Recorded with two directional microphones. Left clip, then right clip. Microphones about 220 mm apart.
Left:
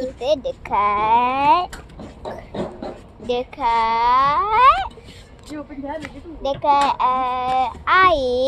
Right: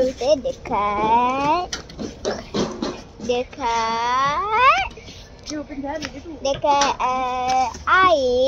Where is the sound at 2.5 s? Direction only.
45° right (ahead or behind).